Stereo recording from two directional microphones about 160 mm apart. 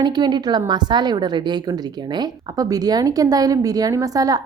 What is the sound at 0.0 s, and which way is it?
A woman's voice, 25° right (ahead or behind).